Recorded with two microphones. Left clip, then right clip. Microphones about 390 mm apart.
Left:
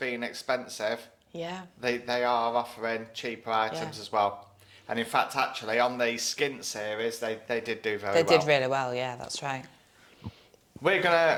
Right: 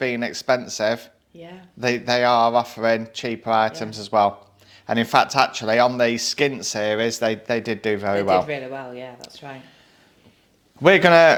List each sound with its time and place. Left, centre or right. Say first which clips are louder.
0.0 s speech: right 9 dB; right
1.4 s speech: left 5 dB; left
1.8 s speech: right 9 dB; right
8.1 s speech: right 1 dB; left
10.8 s speech: right 11 dB; right